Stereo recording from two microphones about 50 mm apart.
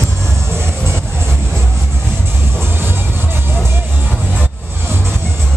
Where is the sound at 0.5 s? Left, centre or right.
Right.